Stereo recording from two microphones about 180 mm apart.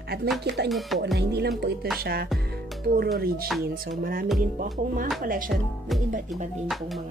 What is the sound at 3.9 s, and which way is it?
Speech, 55° right (ahead or behind).